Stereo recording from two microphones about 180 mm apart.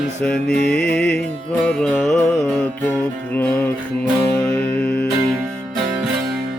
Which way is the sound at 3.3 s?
10° left (ahead or behind).